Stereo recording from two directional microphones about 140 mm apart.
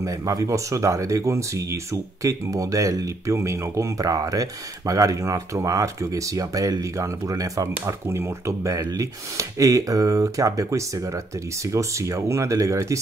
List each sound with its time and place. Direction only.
0.0 s speech: 25° right (ahead or behind)